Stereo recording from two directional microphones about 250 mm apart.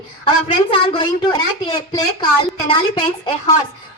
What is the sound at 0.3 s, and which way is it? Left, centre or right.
A woman's voice, left.